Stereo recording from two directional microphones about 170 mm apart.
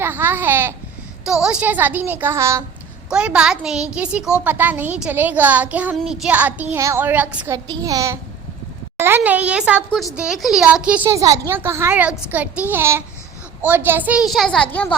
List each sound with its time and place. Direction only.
0.0 s babbling: 10° right (ahead or behind)
1.2 s a woman's voice: 5° right (ahead or behind)
7.5 s a child's voice: 20° right (ahead or behind); by 14.9 s 5° left (ahead or behind)